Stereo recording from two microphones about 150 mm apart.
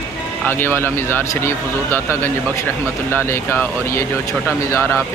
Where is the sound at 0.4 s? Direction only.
15° left (ahead or behind).